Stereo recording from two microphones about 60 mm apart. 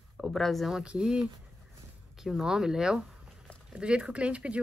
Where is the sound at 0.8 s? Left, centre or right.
Centre.